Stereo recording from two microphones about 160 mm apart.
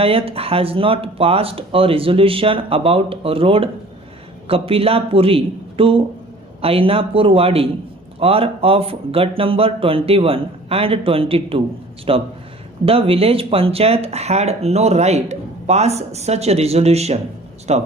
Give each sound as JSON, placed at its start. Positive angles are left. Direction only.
{"t": 0.0, "sound": "speech", "side_deg": -35}